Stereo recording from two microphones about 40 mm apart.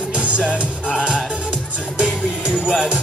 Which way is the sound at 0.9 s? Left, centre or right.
Centre.